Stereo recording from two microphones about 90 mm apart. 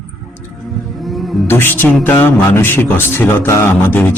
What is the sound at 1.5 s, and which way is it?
A man's voice, 25° left (ahead or behind).